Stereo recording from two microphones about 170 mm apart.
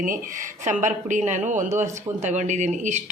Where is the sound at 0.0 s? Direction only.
50° right (ahead or behind).